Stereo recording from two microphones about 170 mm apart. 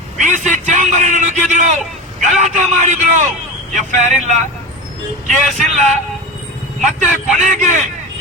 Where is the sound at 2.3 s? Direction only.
45° right (ahead or behind).